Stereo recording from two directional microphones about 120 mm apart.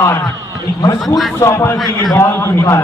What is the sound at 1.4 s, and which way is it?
A man's voice, 20° left (ahead or behind).